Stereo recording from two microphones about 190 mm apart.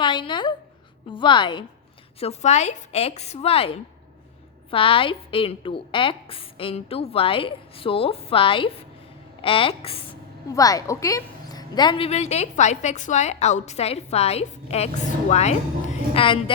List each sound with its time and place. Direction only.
0.0 s a sound: 25° left (ahead or behind)
1.1 s a woman's voice: 25° left (ahead or behind)
10.5 s a woman's voice: 20° left (ahead or behind)